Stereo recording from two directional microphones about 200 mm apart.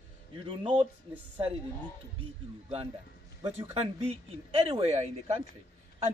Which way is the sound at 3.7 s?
30° right (ahead or behind).